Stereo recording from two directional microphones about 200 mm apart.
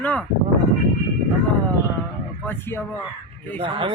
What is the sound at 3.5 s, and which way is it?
Speech, 30° right (ahead or behind).